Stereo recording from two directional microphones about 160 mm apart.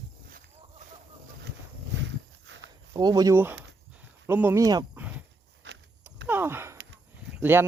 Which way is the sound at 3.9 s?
10° right (ahead or behind).